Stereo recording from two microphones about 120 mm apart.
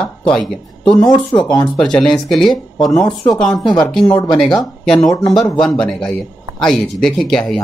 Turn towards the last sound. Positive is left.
turn(degrees=5)  # may be behind; listen again after turning